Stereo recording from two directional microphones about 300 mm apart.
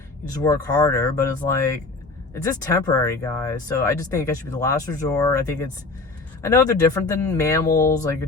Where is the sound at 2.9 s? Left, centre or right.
Centre.